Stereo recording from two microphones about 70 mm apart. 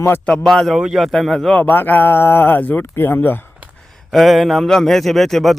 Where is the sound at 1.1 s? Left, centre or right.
Centre.